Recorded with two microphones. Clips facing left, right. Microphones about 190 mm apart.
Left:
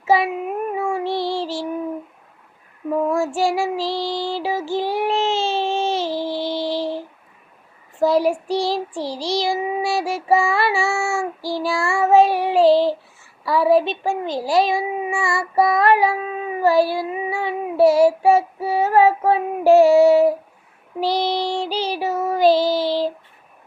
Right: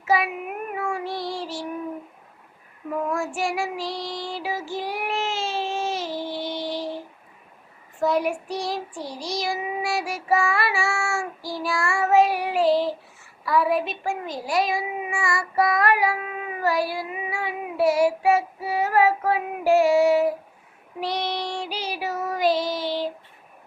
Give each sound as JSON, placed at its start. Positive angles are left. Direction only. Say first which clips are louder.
{"t": 0.1, "sound": "child singing", "louder": "left 5 dB", "side_deg": 30}
{"t": 3.1, "sound": "child singing", "louder": "left 6 dB", "side_deg": 30}
{"t": 8.0, "sound": "a child's voice", "louder": "left 6 dB", "side_deg": 30}
{"t": 21.0, "sound": "child singing", "louder": "left 7 dB", "side_deg": 30}